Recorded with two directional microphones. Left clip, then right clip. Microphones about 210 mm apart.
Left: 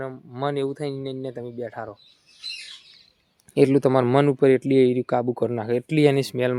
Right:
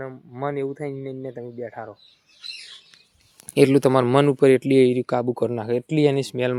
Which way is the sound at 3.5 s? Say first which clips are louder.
Right 2 dB; 10° right (ahead or behind).